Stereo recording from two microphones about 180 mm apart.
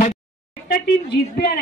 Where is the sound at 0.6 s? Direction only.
60° left (ahead or behind).